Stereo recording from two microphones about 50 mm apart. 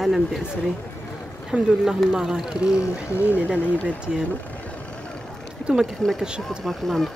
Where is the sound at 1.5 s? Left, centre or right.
Right.